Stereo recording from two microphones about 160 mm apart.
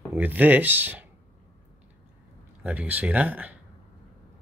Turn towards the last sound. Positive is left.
turn(degrees=-10)  # may be behind; listen again after turning